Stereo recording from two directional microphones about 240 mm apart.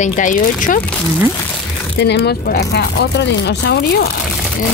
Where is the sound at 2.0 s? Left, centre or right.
Left.